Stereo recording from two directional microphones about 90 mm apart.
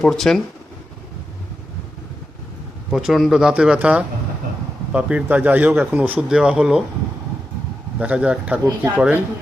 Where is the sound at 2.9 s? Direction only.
5° right (ahead or behind).